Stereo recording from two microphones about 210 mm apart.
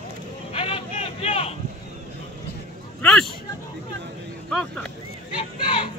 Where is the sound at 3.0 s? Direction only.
5° left (ahead or behind).